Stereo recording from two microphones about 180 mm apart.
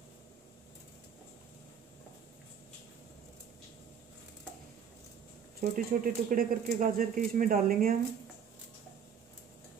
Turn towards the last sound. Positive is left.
turn(degrees=-50)  # may be behind; listen again after turning